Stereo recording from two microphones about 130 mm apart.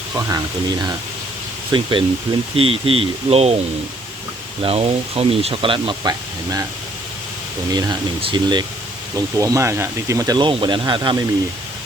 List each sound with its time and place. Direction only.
0.2 s speech: 30° right (ahead or behind); by 3.6 s 50° right (ahead or behind)
4.6 s speech: 50° right (ahead or behind)
6.0 s speech: 25° right (ahead or behind)
7.7 s speech: 30° right (ahead or behind)
9.1 s speech: 25° right (ahead or behind)